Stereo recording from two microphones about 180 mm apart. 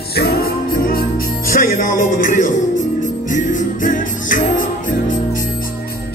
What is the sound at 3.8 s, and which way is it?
Music, 45° left (ahead or behind).